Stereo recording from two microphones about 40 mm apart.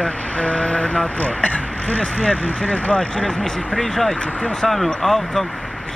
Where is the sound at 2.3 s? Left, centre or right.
Left.